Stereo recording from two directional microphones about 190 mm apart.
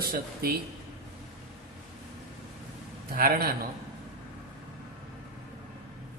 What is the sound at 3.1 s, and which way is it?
Speech, 50° right (ahead or behind).